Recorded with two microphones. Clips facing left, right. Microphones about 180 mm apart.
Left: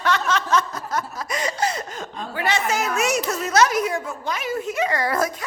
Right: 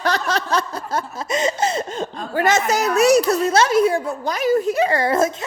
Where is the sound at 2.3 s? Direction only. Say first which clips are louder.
Right 5 dB; 45° right (ahead or behind).